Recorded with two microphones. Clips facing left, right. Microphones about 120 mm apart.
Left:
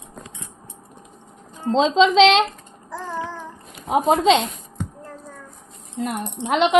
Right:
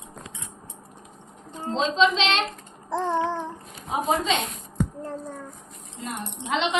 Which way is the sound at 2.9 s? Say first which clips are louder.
Right 5 dB; 25° right (ahead or behind).